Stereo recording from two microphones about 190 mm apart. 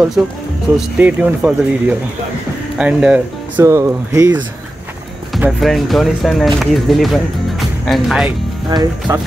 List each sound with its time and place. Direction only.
0.2 s speech: 5° right (ahead or behind)
5.3 s speech: centre (ahead or behind)
8.7 s speech: 25° right (ahead or behind)